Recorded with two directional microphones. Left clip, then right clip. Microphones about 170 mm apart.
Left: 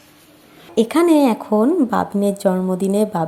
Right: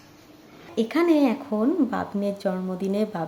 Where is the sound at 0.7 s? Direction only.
35° left (ahead or behind).